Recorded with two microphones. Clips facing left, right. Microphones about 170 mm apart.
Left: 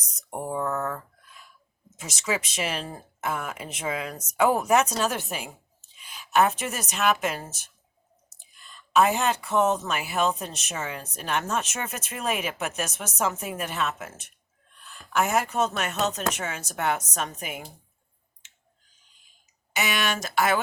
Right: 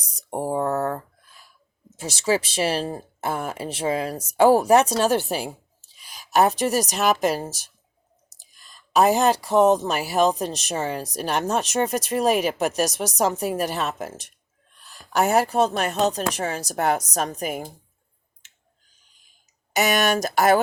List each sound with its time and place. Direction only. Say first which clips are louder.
0.0 s speech: right 6 dB; 30° right (ahead or behind)
19.7 s speech: right 7 dB; 40° right (ahead or behind)